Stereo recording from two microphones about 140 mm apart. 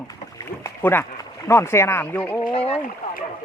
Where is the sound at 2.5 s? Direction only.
45° left (ahead or behind).